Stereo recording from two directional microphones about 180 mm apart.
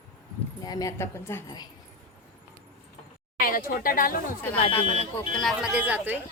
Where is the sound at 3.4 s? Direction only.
50° left (ahead or behind).